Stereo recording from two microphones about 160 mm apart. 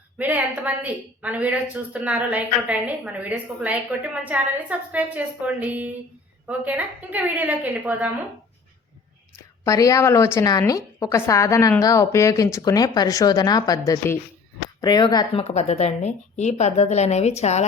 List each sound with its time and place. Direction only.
0.2 s a woman's voice: 10° right (ahead or behind)
9.3 s a woman's voice: 20° left (ahead or behind); by 17.7 s 45° left (ahead or behind)